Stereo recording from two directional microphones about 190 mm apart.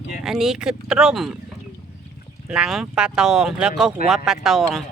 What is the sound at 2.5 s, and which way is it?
Speech, 5° right (ahead or behind).